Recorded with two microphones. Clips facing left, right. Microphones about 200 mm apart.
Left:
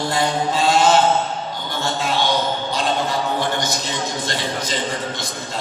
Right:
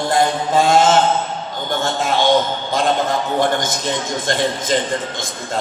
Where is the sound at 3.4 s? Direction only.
50° right (ahead or behind).